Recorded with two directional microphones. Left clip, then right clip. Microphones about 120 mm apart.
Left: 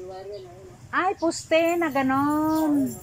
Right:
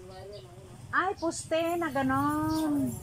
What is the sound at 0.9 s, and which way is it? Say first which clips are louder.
A woman's voice: left 5 dB; 20° left (ahead or behind).